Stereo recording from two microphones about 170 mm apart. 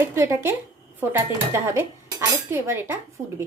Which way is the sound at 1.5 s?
15° right (ahead or behind).